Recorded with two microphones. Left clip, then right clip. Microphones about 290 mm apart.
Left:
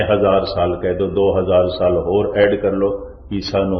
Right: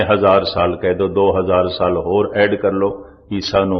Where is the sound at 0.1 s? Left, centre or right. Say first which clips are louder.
Right 2 dB; right.